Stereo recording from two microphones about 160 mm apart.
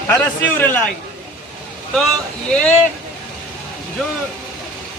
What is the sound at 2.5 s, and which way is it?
Speech, 5° left (ahead or behind).